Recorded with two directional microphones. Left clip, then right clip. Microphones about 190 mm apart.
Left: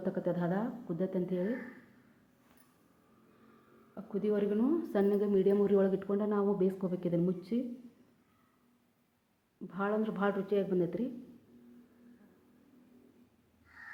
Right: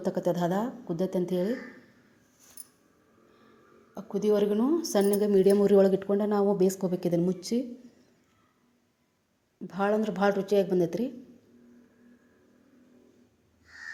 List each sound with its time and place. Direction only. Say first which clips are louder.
0.0 s speech: right 7 dB; 25° right (ahead or behind)
3.9 s speech: right 7 dB; 25° right (ahead or behind)
9.6 s speech: right 7 dB; 30° right (ahead or behind)